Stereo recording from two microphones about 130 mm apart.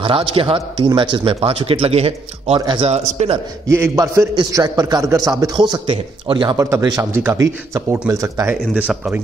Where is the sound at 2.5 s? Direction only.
40° right (ahead or behind).